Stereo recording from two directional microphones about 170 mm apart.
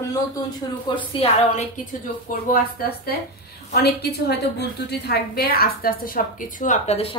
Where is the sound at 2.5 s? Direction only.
60° left (ahead or behind); by 7.2 s 35° left (ahead or behind).